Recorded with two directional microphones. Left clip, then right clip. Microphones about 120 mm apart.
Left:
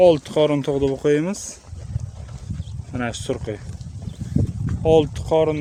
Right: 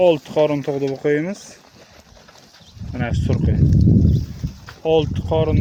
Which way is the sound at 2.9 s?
30° left (ahead or behind).